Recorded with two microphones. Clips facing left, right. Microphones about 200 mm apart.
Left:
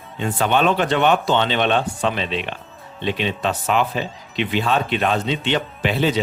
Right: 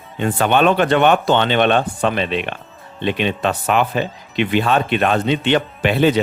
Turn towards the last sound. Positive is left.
turn(degrees=-60)  # may be behind; listen again after turning